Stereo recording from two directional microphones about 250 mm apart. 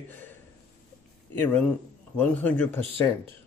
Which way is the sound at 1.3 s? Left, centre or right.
Centre.